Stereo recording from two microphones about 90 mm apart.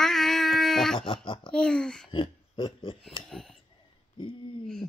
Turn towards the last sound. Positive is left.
turn(degrees=5)  # may be behind; listen again after turning